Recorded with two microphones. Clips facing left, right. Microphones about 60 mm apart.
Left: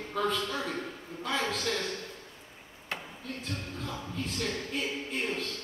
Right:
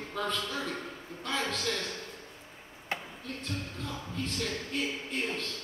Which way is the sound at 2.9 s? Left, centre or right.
Centre.